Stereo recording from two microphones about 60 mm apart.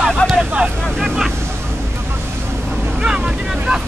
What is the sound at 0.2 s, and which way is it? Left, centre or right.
Vehicle, left.